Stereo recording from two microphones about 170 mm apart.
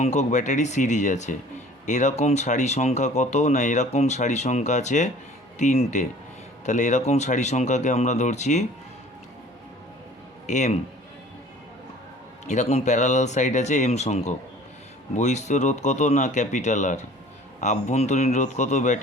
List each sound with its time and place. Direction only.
0.0 s speech: 45° left (ahead or behind)
10.4 s a man's voice: 45° left (ahead or behind)
12.5 s speech: 40° left (ahead or behind)